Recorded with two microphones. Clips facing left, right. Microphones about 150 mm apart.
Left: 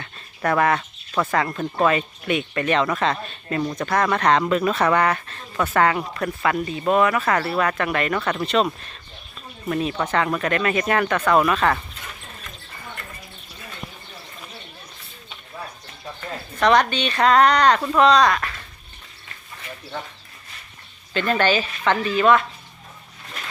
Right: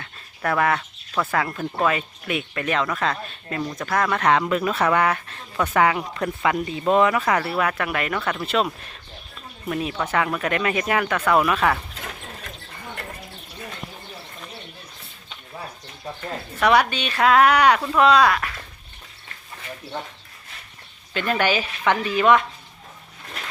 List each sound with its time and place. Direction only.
0.0 s a sound: centre (ahead or behind)
1.3 s speech: 5° right (ahead or behind)
11.9 s mechanisms: 70° right (ahead or behind)
16.6 s speech: 10° right (ahead or behind)
17.7 s speech: 5° left (ahead or behind)
21.1 s speech: 10° right (ahead or behind)